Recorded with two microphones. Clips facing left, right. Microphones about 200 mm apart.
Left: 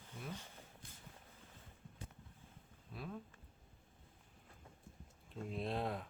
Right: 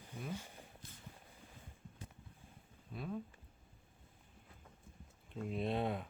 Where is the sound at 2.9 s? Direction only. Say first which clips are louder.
Right 4 dB; centre (ahead or behind).